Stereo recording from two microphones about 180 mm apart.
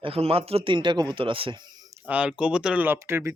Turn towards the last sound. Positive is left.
turn(degrees=-15)  # may be behind; listen again after turning